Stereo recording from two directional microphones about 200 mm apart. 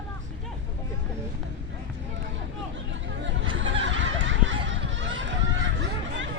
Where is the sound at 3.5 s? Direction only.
70° right (ahead or behind).